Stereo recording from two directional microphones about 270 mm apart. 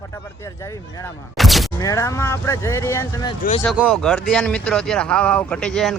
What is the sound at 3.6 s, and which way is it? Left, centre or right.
Speech, centre.